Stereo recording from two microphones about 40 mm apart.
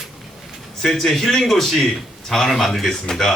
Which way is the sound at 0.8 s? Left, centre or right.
Centre.